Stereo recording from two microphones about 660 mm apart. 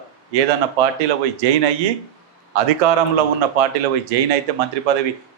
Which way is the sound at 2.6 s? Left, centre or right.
Right.